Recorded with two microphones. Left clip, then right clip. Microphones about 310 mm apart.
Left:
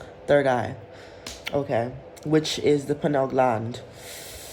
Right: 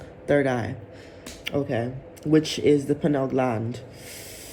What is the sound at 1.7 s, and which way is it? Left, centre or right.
A woman's voice, centre.